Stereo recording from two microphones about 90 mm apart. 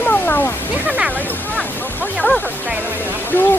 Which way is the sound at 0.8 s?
15° right (ahead or behind).